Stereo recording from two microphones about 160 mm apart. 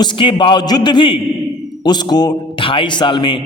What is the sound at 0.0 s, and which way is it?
A man's voice, 30° left (ahead or behind).